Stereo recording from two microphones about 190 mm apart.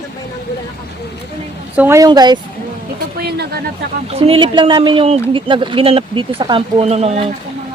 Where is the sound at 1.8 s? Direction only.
15° right (ahead or behind).